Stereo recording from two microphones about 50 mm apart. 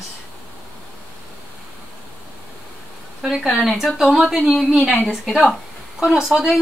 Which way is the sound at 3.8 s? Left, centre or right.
Centre.